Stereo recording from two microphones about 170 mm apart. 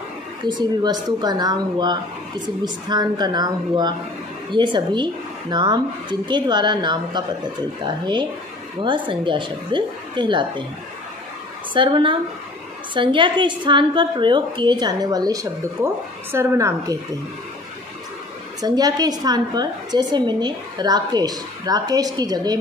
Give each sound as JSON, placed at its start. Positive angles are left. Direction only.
{"t": 0.4, "sound": "a woman's voice", "side_deg": -25}
{"t": 11.7, "sound": "a woman's voice", "side_deg": -30}
{"t": 18.6, "sound": "a woman's voice", "side_deg": -25}